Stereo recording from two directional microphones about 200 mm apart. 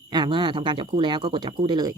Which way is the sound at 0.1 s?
20° right (ahead or behind).